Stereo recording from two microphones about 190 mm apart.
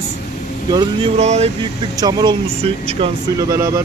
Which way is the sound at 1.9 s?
20° right (ahead or behind).